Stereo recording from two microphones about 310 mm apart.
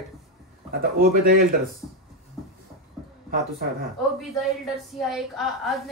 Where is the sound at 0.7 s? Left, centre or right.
Right.